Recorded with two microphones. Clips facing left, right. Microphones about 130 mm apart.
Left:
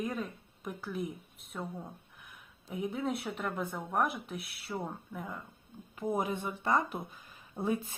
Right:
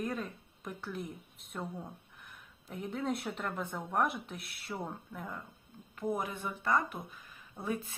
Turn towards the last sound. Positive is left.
turn(degrees=25)  # may be behind; listen again after turning